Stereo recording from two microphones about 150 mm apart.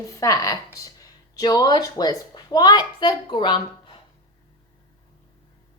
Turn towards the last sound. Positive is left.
turn(degrees=30)  # may be behind; listen again after turning